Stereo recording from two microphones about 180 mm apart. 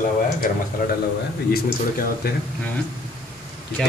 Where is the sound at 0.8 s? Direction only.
50° left (ahead or behind).